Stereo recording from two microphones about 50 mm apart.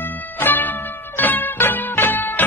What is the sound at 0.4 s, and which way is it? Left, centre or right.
Music, left.